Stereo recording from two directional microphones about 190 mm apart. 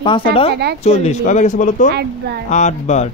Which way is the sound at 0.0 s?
30° left (ahead or behind).